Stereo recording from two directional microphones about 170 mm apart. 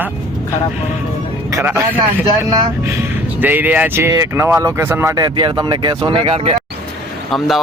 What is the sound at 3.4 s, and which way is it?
Speech, 10° right (ahead or behind).